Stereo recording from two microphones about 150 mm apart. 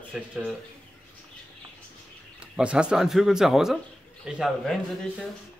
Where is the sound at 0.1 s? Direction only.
5° right (ahead or behind).